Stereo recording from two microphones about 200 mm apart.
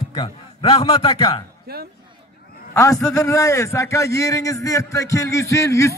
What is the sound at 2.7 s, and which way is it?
A man's voice, 15° left (ahead or behind).